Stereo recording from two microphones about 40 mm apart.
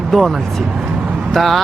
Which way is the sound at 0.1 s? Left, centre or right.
Centre.